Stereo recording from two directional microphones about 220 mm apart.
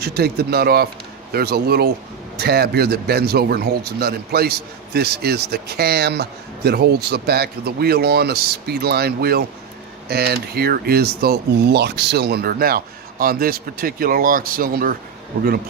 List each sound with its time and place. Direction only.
0.0 s speech: 45° right (ahead or behind)